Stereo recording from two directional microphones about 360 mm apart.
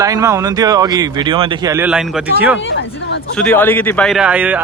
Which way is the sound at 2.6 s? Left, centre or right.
Left.